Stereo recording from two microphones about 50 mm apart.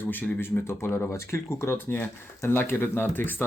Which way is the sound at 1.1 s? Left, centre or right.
Left.